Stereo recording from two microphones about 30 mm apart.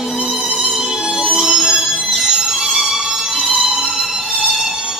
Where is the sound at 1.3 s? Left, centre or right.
Centre.